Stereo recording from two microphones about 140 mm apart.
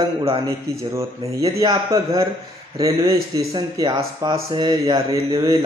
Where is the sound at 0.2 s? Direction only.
40° right (ahead or behind).